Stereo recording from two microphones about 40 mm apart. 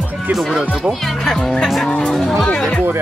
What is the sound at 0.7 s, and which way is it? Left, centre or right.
Speech, centre.